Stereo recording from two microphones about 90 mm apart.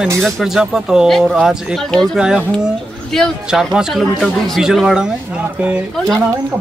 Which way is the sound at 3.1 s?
5° left (ahead or behind).